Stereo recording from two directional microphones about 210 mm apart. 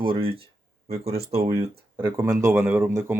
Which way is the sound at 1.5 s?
15° right (ahead or behind).